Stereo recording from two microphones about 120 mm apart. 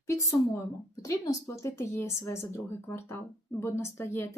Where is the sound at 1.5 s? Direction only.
20° left (ahead or behind).